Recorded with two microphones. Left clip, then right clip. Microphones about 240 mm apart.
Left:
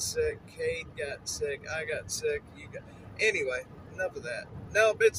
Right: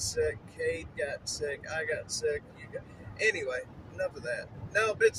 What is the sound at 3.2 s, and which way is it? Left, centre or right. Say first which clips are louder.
Speech: left 1 dB; centre.